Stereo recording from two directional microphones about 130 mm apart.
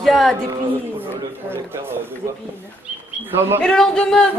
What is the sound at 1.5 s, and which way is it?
Speech, 20° right (ahead or behind).